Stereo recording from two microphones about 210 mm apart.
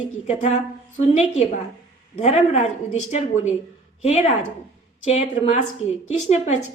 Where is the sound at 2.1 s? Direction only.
35° left (ahead or behind).